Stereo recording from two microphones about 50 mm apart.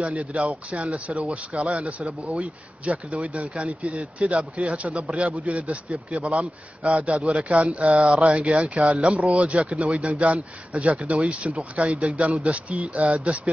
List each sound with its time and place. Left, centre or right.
0.0 s a man's voice: right